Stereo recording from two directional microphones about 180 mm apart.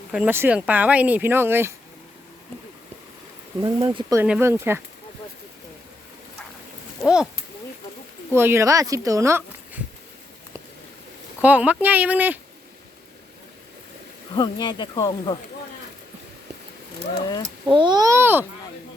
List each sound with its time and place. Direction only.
0.1 s speech: 10° right (ahead or behind)
3.6 s a child's voice: 25° right (ahead or behind)
4.2 s speech: 10° right (ahead or behind)
7.0 s a sound: 5° right (ahead or behind)
8.3 s speech: 15° right (ahead or behind)
11.4 s speech: 10° right (ahead or behind)
14.3 s speech: 25° left (ahead or behind)
17.7 s a child's voice: 25° right (ahead or behind)